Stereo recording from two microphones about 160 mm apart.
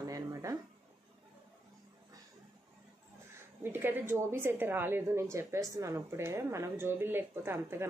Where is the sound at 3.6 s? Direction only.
15° right (ahead or behind).